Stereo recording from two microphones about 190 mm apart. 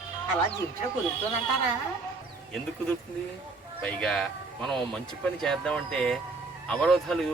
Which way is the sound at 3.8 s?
5° left (ahead or behind).